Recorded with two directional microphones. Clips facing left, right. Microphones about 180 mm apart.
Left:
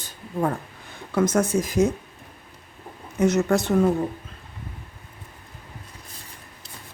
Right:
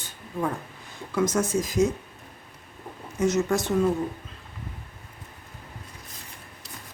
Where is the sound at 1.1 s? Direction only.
60° left (ahead or behind).